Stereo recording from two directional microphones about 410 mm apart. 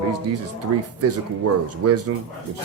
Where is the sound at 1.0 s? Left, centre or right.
Right.